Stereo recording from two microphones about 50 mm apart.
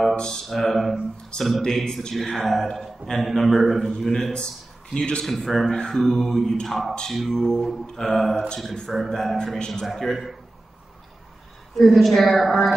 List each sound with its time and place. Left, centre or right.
0.1 s a sound: centre
0.5 s a man's voice: centre
1.6 s mantra: centre
2.0 s a man's voice: centre
4.1 s mantra: centre
4.9 s speech: centre
5.2 s a man's voice: centre
5.7 s mantra: centre
6.7 s a man's voice: centre
11.7 s a man's voice: centre